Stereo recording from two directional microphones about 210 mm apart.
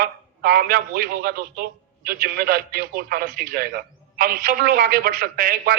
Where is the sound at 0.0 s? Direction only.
45° right (ahead or behind).